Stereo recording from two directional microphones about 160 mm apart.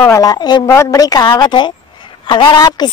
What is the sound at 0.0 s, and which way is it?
A woman's voice, 20° left (ahead or behind).